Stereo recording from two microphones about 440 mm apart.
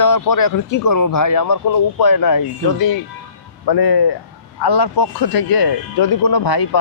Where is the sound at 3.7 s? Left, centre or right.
Left.